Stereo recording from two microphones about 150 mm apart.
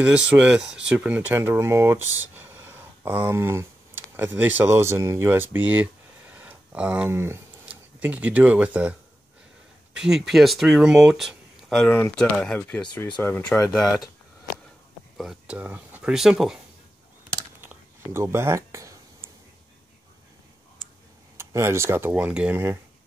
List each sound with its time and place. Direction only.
0.0 s speech: 10° right (ahead or behind)
9.9 s speech: 5° right (ahead or behind); by 13.3 s 10° left (ahead or behind)
15.1 s speech: 5° right (ahead or behind)
17.6 s a sound: 15° right (ahead or behind)
21.4 s speech: 15° right (ahead or behind)